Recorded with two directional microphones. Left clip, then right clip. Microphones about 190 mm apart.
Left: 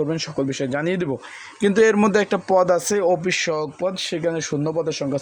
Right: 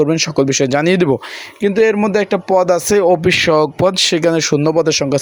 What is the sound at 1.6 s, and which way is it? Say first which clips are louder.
Speech: right 3 dB; 10° right (ahead or behind).